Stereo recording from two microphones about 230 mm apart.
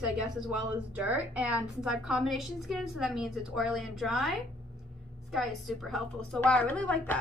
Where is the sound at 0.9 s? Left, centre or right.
Centre.